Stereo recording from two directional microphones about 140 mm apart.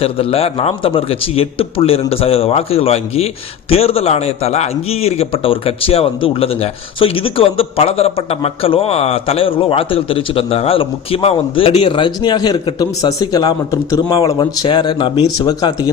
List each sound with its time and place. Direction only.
0.0 s a man's voice: 45° left (ahead or behind); by 15.9 s 30° left (ahead or behind)